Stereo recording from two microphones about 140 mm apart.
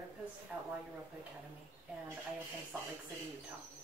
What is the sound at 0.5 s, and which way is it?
Speech, 10° right (ahead or behind).